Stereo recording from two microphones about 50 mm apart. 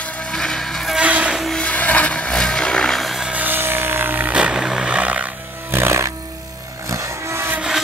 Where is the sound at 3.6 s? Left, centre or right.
Right.